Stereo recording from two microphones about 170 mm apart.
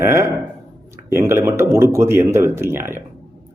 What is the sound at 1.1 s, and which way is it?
Speech, 15° right (ahead or behind).